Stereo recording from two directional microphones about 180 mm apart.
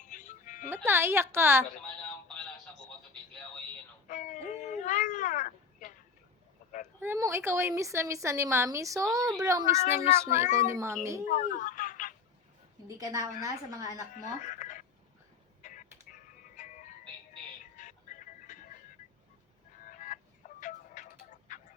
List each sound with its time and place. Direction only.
0.0 s music: 45° left (ahead or behind)
0.9 s a woman's voice: 15° right (ahead or behind)
2.0 s a sound: 5° left (ahead or behind)
4.1 s cat: 45° left (ahead or behind)
7.0 s a woman's voice: 15° right (ahead or behind)
11.3 s telephone: 45° left (ahead or behind)
13.0 s a woman's voice: 20° right (ahead or behind)
14.1 s speech: 45° left (ahead or behind)
15.6 s music: 45° left (ahead or behind)
19.8 s music: 45° left (ahead or behind)